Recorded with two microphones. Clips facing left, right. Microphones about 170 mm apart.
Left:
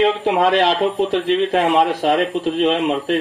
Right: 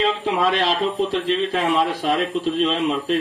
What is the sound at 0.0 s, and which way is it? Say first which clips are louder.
Speech: left 5 dB; 60° left (ahead or behind).